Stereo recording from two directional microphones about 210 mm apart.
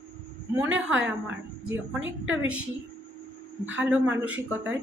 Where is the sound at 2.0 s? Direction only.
65° right (ahead or behind).